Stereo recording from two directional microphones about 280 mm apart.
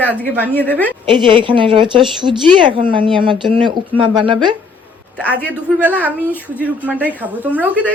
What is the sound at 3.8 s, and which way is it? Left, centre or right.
Speech, centre.